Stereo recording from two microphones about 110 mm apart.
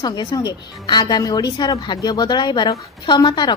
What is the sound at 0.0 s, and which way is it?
A woman's voice, 40° left (ahead or behind).